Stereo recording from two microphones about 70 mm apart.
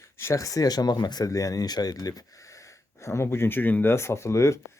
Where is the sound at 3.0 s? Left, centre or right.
Left.